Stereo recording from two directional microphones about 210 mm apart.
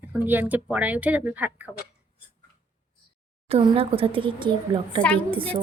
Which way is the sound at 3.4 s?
30° right (ahead or behind).